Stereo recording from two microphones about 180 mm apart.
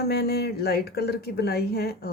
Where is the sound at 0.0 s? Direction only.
60° left (ahead or behind).